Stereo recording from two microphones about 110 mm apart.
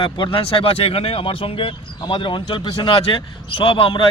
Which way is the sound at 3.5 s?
55° left (ahead or behind).